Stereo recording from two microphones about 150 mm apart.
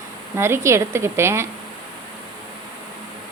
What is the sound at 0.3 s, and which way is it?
A woman's voice, 15° right (ahead or behind).